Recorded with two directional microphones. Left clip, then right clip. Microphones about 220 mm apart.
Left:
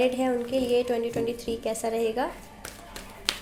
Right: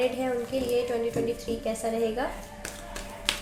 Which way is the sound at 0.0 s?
45° left (ahead or behind).